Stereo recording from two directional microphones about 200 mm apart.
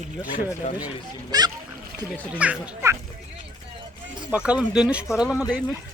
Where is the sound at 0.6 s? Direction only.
40° left (ahead or behind).